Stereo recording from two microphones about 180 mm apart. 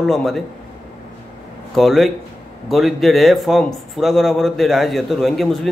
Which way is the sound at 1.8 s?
Centre (ahead or behind).